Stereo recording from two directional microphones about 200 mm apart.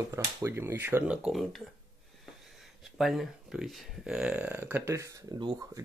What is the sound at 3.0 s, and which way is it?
Speech, centre (ahead or behind).